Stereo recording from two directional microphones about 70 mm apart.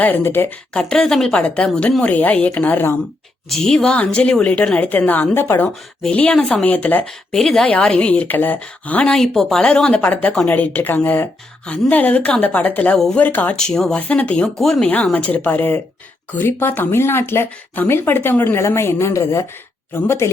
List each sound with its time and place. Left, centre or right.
0.0 s speech: left
0.7 s a woman's voice: centre
3.5 s a woman's voice: centre; by 5.7 s left
6.1 s a woman's voice: centre
7.0 s speech: centre
9.1 s speech: centre
10.0 s a woman's voice: left
13.6 s speech: centre
14.6 s speech: centre
14.8 s a woman's voice: left